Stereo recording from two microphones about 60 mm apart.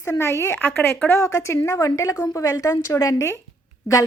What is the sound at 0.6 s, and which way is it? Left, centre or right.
Speech, left.